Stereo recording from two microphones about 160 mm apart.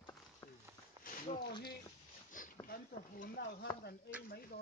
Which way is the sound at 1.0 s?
60° left (ahead or behind).